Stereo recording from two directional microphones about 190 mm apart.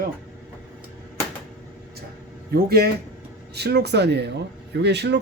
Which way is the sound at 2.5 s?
55° right (ahead or behind).